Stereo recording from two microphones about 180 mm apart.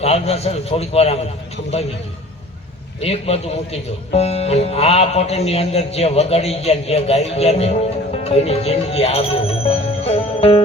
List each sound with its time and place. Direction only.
0.0 s speech: 35° left (ahead or behind)
3.0 s speech: 35° left (ahead or behind)
9.6 s music: 35° left (ahead or behind)